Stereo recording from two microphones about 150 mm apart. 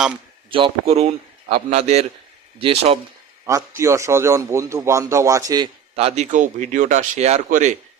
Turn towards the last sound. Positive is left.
turn(degrees=-55)  # may be behind; listen again after turning